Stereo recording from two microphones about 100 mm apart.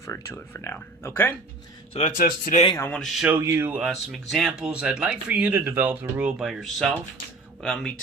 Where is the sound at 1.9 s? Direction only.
90° left.